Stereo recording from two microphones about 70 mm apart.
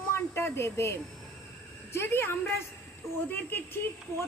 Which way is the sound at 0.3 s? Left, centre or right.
Left.